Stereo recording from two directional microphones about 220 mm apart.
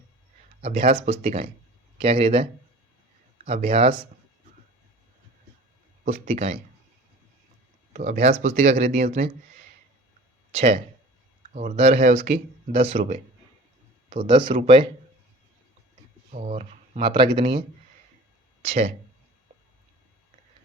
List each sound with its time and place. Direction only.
0.6 s speech: 30° right (ahead or behind)
6.1 s speech: 30° right (ahead or behind)
7.9 s speech: 30° right (ahead or behind)
10.5 s speech: 30° right (ahead or behind)
16.3 s speech: 30° right (ahead or behind)
18.6 s speech: 30° right (ahead or behind)